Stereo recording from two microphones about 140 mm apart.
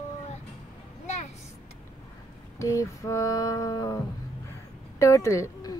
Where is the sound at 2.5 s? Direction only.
20° left (ahead or behind).